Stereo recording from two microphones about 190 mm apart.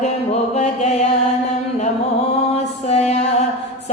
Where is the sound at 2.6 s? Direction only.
35° left (ahead or behind).